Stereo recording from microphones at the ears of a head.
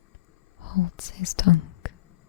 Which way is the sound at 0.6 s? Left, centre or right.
Left.